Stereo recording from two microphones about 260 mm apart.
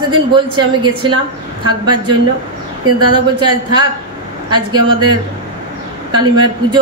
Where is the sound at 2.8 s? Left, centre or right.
Right.